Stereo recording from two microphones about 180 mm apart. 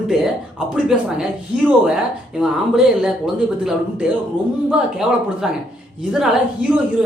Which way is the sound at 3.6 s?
5° right (ahead or behind).